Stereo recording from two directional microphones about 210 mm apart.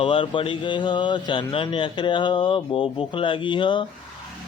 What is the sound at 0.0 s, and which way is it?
Speech, 25° left (ahead or behind).